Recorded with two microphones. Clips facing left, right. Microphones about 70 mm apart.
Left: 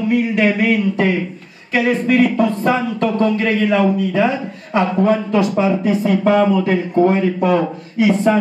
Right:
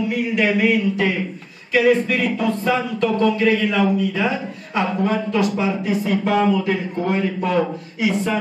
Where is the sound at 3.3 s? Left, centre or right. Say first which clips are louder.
Left 2 dB; centre.